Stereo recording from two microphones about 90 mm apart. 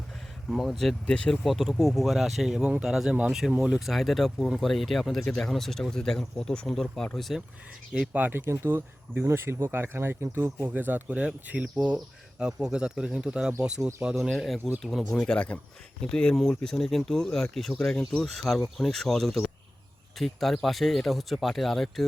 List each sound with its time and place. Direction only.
0.5 s speech: centre (ahead or behind)
1.5 s speech: centre (ahead or behind)
8.1 s speech: 20° right (ahead or behind); by 22.0 s centre (ahead or behind)